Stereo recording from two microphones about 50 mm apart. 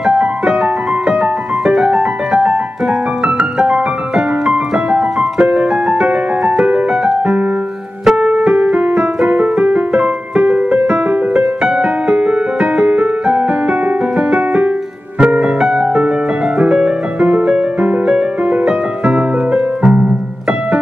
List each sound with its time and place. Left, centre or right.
0.0 s music: centre
3.5 s piano: centre
8.2 s music: right